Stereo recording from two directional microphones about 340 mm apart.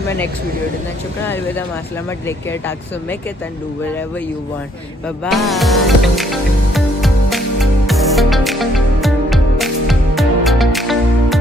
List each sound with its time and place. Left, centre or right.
2.0 s speech: centre
5.0 s music: centre